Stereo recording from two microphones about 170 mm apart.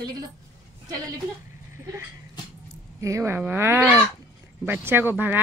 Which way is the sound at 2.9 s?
15° right (ahead or behind).